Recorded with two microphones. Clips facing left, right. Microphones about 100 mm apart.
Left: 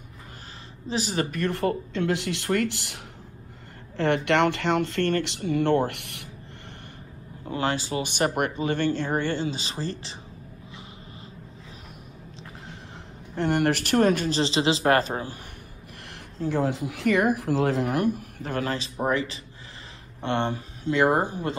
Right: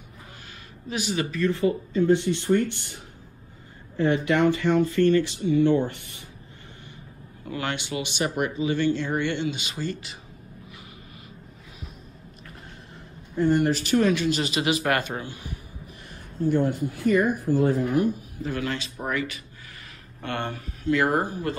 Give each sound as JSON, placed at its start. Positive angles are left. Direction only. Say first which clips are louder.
{"t": 0.8, "sound": "speech", "louder": "left 1 dB", "side_deg": 35}
{"t": 1.3, "sound": "speech", "louder": "right 5 dB", "side_deg": 60}
{"t": 3.9, "sound": "speech", "louder": "even", "side_deg": 70}
{"t": 7.4, "sound": "speech", "louder": "left 3 dB", "side_deg": 30}
{"t": 8.1, "sound": "speech", "louder": "left 1 dB", "side_deg": 50}
{"t": 12.6, "sound": "a sound", "louder": "left 2 dB", "side_deg": 85}
{"t": 14.0, "sound": "speech", "louder": "left 1 dB", "side_deg": 40}
{"t": 16.1, "sound": "speech", "louder": "right 4 dB", "side_deg": 90}
{"t": 18.5, "sound": "speech", "louder": "left 1 dB", "side_deg": 35}